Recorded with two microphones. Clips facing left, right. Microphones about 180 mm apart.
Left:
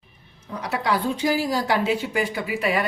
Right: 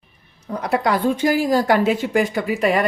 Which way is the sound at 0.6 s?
50° right (ahead or behind).